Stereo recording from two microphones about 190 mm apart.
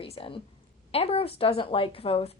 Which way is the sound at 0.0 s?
30° left (ahead or behind).